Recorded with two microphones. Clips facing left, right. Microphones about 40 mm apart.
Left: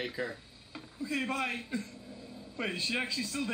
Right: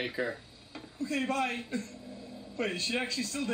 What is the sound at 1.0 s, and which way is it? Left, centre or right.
Speech, centre.